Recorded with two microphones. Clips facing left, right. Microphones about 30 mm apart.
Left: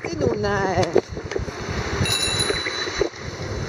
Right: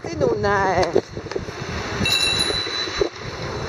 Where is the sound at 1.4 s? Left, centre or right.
Centre.